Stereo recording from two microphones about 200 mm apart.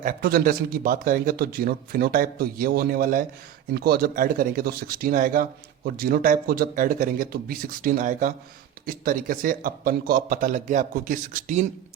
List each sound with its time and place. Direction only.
0.0 s a man's voice: 45° right (ahead or behind)